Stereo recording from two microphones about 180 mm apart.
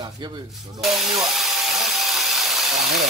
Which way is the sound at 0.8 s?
Centre (ahead or behind).